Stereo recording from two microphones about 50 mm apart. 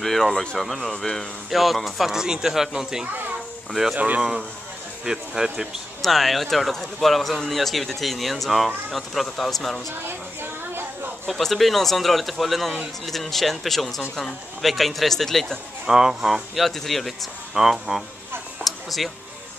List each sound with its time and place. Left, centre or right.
0.0 s speech: centre
1.5 s speech: centre
3.9 s speech: right
4.2 s speech: centre
6.0 s speech: centre
10.0 s a sound: right
11.2 s speech: centre
15.9 s speech: centre
17.6 s speech: centre
18.6 s a sound: centre